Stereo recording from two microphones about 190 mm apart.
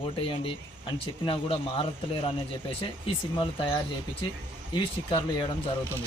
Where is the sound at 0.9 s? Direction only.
25° left (ahead or behind).